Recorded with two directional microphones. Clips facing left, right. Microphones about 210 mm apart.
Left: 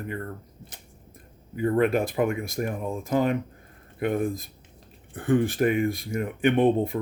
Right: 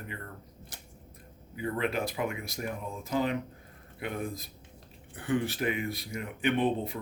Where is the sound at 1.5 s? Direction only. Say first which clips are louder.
Left 9 dB; 50° left (ahead or behind).